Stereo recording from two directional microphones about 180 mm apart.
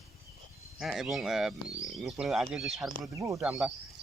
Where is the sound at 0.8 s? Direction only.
Centre (ahead or behind).